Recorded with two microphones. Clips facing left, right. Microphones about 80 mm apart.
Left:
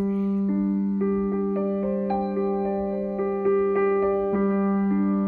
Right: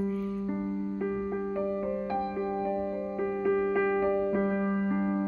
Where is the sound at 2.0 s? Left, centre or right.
Left.